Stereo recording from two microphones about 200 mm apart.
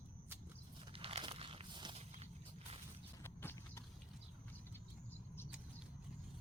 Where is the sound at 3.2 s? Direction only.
15° left (ahead or behind).